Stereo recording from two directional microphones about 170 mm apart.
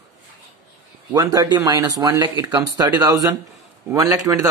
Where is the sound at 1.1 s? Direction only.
25° right (ahead or behind).